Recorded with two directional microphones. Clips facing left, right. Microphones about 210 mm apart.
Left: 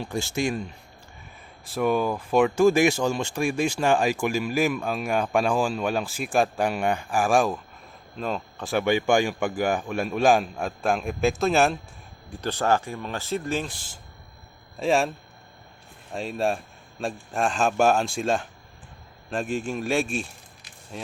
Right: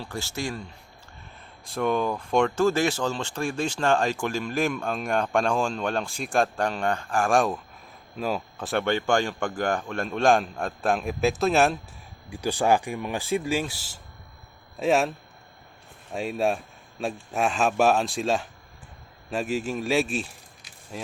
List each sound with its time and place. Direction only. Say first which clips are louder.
0.0 s speech: left 5 dB; 15° left (ahead or behind)
1.6 s speech: left 2 dB; 5° left (ahead or behind)
8.8 s a man's voice: left 3 dB; 10° left (ahead or behind)
12.3 s a man's voice: right 1 dB; 10° right (ahead or behind)
16.1 s a man's voice: right 1 dB; 5° right (ahead or behind)